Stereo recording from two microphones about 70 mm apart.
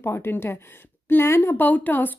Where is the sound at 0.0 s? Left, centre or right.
Left.